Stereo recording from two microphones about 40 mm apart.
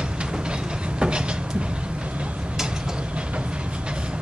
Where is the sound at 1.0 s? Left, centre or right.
Right.